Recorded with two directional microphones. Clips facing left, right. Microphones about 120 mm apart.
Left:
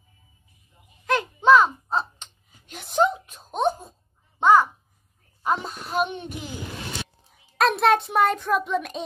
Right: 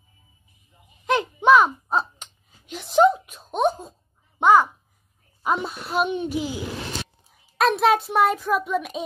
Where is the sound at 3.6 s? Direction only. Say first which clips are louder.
Right 2 dB; 20° right (ahead or behind).